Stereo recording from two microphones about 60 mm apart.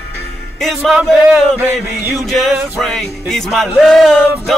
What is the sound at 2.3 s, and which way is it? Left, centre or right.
Speech, centre.